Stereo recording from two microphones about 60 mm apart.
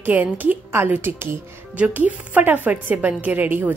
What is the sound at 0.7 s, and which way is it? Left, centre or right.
Speech, right.